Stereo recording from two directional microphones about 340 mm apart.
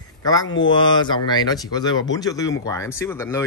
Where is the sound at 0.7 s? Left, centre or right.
Centre.